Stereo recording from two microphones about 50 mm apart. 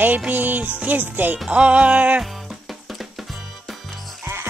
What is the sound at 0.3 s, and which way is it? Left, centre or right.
Music, right.